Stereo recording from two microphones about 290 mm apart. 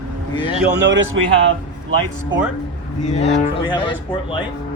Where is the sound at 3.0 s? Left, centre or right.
Left.